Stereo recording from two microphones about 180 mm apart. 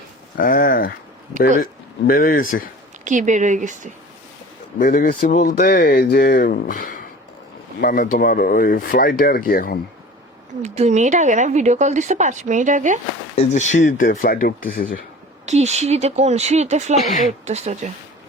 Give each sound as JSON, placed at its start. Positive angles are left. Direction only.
{"t": 0.3, "sound": "speech", "side_deg": 50}
{"t": 2.0, "sound": "speech", "side_deg": 50}
{"t": 3.0, "sound": "speech", "side_deg": -45}
{"t": 4.8, "sound": "speech", "side_deg": 50}
{"t": 5.6, "sound": "speech", "side_deg": 60}
{"t": 10.6, "sound": "speech", "side_deg": -40}
{"t": 13.3, "sound": "speech", "side_deg": 35}
{"t": 15.4, "sound": "speech", "side_deg": -40}